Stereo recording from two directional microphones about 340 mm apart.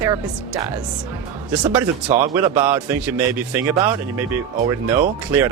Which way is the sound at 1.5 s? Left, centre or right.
Centre.